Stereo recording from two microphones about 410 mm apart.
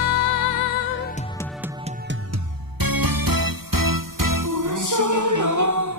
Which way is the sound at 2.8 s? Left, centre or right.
Right.